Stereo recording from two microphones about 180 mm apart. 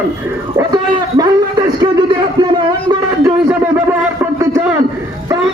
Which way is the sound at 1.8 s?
25° right (ahead or behind).